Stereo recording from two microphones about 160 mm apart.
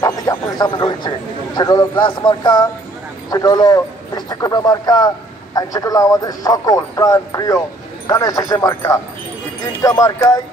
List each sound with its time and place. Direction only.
0.0 s a man's voice: 25° left (ahead or behind)